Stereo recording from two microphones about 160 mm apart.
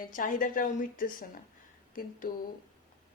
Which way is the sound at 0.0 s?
60° left (ahead or behind).